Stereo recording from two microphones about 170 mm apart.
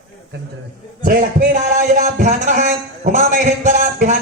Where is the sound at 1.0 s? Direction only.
55° right (ahead or behind).